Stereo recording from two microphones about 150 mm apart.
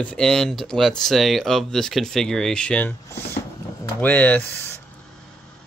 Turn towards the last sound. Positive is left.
turn(degrees=10)  # may be behind; listen again after turning